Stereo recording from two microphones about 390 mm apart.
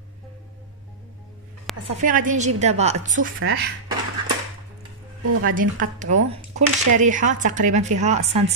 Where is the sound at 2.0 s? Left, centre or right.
Centre.